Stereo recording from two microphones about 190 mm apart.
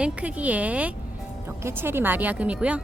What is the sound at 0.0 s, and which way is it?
Speech, 5° right (ahead or behind).